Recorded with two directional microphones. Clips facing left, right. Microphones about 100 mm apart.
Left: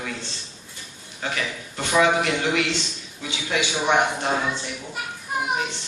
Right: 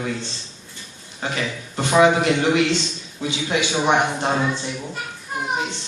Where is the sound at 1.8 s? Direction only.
25° right (ahead or behind).